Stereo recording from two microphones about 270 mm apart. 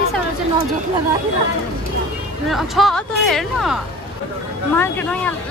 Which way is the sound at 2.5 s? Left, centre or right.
Centre.